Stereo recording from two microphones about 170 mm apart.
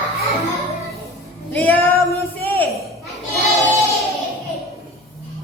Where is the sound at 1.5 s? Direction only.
10° left (ahead or behind).